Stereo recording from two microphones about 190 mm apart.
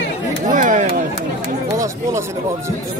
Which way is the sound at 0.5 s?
45° right (ahead or behind).